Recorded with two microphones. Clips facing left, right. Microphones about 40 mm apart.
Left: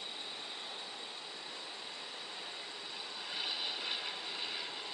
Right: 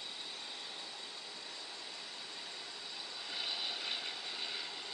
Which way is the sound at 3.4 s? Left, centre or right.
Centre.